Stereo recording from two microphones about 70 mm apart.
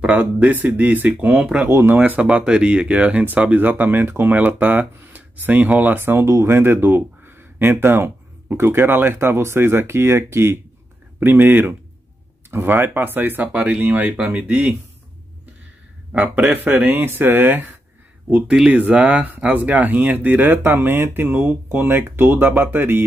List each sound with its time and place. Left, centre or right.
0.1 s speech: centre
1.7 s speech: right
2.0 s speech: right
2.2 s speech: centre; by 6.2 s right
6.2 s speech: right
6.5 s speech: right
16.1 s speech: centre